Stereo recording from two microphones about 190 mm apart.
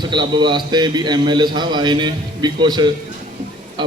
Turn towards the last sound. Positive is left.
turn(degrees=-25)  # may be behind; listen again after turning